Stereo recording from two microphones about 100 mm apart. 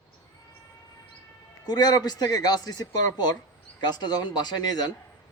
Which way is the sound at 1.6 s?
45° left (ahead or behind).